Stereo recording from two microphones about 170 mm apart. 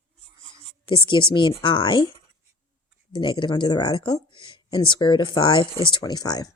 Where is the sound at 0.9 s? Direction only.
30° left (ahead or behind).